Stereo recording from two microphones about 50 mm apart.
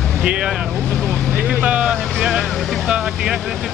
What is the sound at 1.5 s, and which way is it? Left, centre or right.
Speech, right.